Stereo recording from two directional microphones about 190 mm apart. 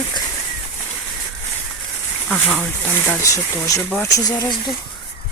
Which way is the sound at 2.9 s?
10° left (ahead or behind).